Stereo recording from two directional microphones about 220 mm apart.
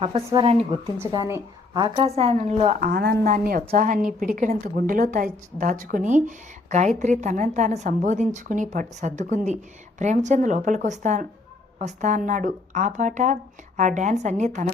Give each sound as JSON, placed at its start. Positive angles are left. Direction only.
{"t": 0.3, "sound": "a woman's voice", "side_deg": -25}
{"t": 2.9, "sound": "a woman's voice", "side_deg": -45}